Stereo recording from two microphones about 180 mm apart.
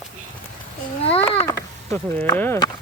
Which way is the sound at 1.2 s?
15° left (ahead or behind).